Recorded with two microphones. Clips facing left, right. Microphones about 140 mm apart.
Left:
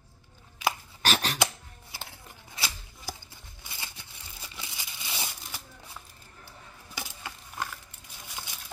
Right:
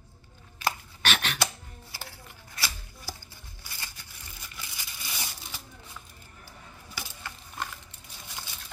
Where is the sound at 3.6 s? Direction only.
20° left (ahead or behind).